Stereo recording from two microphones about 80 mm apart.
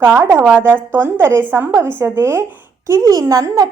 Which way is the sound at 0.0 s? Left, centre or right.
Right.